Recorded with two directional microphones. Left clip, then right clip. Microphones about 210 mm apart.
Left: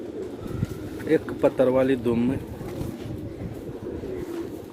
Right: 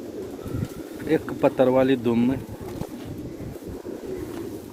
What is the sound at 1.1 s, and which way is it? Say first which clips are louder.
Speech: even; 35° right (ahead or behind).